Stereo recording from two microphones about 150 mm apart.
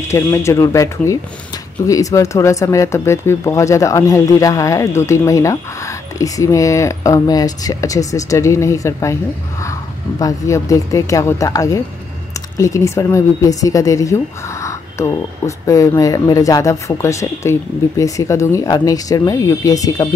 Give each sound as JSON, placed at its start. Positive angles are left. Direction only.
{"t": 0.1, "sound": "speech", "side_deg": 20}